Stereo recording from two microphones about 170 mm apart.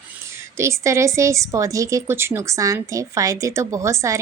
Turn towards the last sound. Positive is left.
turn(degrees=-15)  # may be behind; listen again after turning